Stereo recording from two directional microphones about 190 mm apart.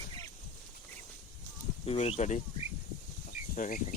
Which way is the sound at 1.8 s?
30° left (ahead or behind).